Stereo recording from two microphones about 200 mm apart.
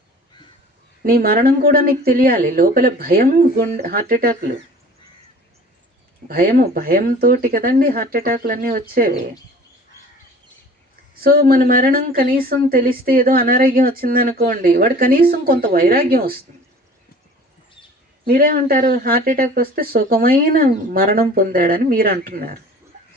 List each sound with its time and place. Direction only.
1.0 s speech: 50° right (ahead or behind)
6.2 s speech: 45° right (ahead or behind)
11.1 s speech: 50° right (ahead or behind)
18.3 s speech: 45° right (ahead or behind)